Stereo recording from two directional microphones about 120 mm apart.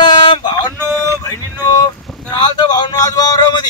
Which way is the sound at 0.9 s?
30° left (ahead or behind).